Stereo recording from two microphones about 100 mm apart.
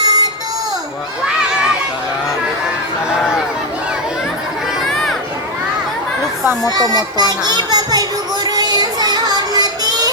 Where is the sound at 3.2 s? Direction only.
5° right (ahead or behind).